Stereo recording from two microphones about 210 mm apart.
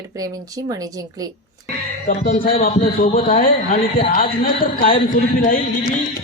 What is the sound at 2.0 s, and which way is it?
A man's voice, 45° left (ahead or behind).